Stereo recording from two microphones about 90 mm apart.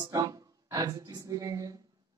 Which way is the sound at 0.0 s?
40° right (ahead or behind).